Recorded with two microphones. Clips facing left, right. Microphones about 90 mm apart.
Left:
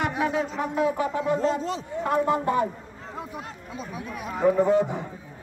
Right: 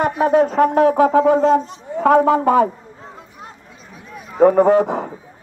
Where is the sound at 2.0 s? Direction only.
90° right.